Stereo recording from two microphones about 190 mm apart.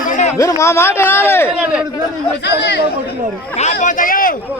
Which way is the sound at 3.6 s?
45° left (ahead or behind).